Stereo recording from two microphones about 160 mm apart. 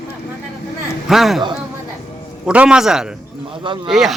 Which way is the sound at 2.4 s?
5° right (ahead or behind).